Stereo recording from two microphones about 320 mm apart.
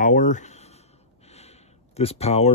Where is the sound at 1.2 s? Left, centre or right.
Centre.